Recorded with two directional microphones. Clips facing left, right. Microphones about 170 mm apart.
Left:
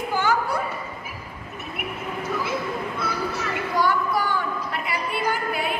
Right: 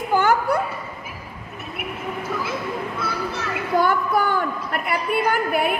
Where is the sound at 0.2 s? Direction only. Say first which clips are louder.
Right 2 dB; 60° right (ahead or behind).